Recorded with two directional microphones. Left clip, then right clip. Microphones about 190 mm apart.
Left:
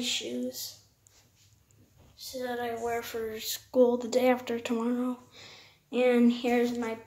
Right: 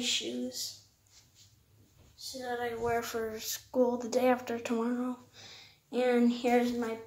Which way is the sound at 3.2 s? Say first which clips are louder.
Left 2 dB; 15° left (ahead or behind).